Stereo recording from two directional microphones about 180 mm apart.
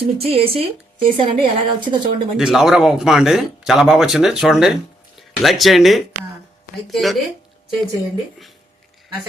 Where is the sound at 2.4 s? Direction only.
Centre (ahead or behind).